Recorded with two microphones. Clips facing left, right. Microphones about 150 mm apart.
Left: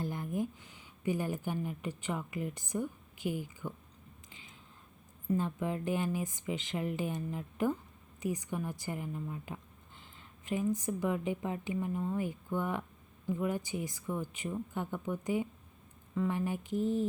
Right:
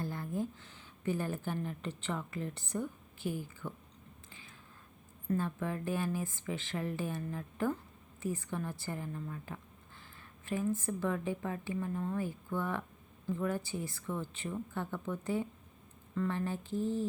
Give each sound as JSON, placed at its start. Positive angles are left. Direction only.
{"t": 0.0, "sound": "speech", "side_deg": 15}
{"t": 4.3, "sound": "a sound", "side_deg": 15}
{"t": 5.3, "sound": "a woman's voice", "side_deg": 15}